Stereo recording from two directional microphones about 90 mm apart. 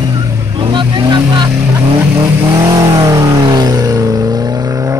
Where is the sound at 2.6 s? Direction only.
45° right (ahead or behind).